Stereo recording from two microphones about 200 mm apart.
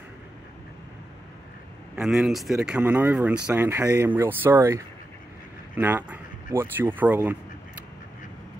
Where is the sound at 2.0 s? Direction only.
5° right (ahead or behind).